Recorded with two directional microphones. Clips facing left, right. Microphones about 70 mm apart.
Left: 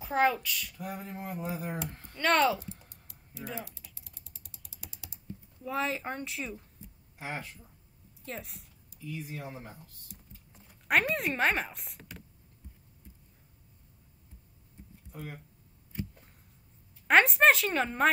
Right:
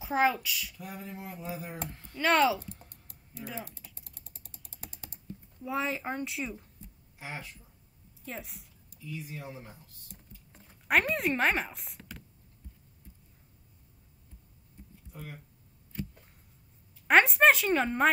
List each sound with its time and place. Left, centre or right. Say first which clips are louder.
0.0 s speech: even; centre
0.7 s a sound: left 3 dB; left
2.1 s speech: right 1 dB; centre
2.6 s typing: left 1 dB; right
5.6 s speech: even; centre
7.2 s a sound: left 3 dB; left
8.3 s speech: even; centre
9.0 s a sound: left 1 dB; left
10.9 s speech: right 1 dB; centre
17.1 s speech: right 1 dB; centre